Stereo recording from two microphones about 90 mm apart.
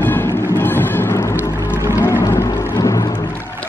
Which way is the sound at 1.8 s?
20° right (ahead or behind).